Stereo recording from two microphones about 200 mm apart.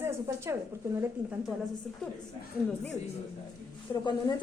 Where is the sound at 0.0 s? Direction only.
15° right (ahead or behind).